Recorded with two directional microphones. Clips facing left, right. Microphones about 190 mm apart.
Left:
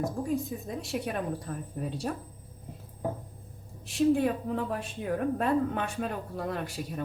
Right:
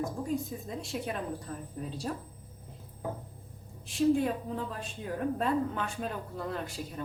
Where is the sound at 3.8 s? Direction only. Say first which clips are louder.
Left 2 dB; 65° left (ahead or behind).